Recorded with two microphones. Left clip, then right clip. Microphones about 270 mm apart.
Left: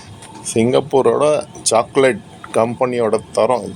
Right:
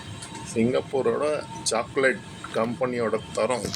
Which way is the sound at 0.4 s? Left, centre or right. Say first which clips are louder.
Left 10 dB; left.